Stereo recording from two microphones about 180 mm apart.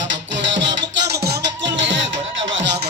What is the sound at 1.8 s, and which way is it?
Music, 90° right.